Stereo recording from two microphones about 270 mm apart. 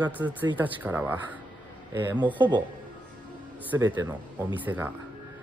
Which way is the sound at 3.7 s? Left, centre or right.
Centre.